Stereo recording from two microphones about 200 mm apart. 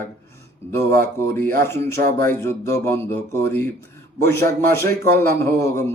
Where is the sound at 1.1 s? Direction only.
10° left (ahead or behind).